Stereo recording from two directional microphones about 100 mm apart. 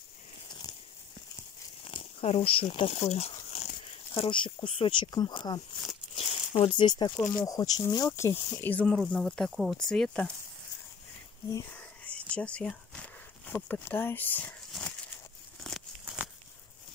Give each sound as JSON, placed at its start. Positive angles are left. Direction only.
{"t": 0.5, "sound": "a sound", "side_deg": 45}
{"t": 1.9, "sound": "speech", "side_deg": 65}
{"t": 4.1, "sound": "speech", "side_deg": 60}
{"t": 5.1, "sound": "speech", "side_deg": 50}
{"t": 6.1, "sound": "speech", "side_deg": 65}
{"t": 7.2, "sound": "speech", "side_deg": 35}
{"t": 8.1, "sound": "speech", "side_deg": 25}
{"t": 8.6, "sound": "speech", "side_deg": 15}
{"t": 11.7, "sound": "whispering", "side_deg": 15}
{"t": 13.5, "sound": "speech", "side_deg": 15}